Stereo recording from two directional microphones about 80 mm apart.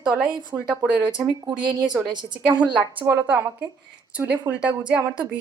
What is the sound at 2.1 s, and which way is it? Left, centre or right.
Speech, right.